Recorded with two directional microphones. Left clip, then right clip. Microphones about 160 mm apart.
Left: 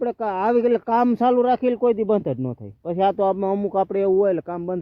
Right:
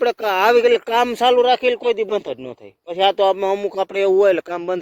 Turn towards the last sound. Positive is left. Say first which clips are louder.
# right 5 dB
turn(degrees=-25)  # may be behind; listen again after turning